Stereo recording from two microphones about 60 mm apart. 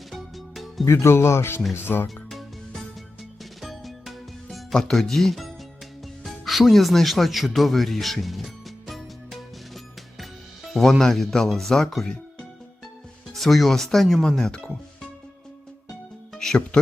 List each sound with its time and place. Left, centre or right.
0.1 s music: centre
0.9 s speech: left
2.0 s music: centre
6.2 s speech: centre
8.9 s music: centre
10.8 s speech: centre
16.3 s music: centre